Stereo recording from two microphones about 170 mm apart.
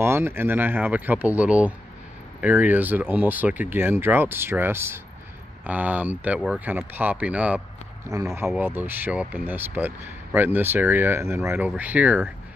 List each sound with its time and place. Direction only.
0.0 s speech: 15° right (ahead or behind)